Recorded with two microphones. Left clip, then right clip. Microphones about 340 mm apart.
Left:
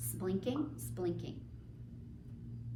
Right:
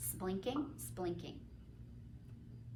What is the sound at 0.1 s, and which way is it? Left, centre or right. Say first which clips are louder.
A woman's voice: left 3 dB; centre.